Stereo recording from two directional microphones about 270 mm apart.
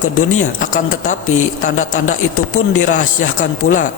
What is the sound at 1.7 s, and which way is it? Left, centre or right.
Speech, left.